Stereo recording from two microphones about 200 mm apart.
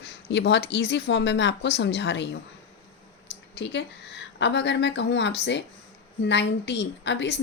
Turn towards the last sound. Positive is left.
turn(degrees=60)  # may be behind; listen again after turning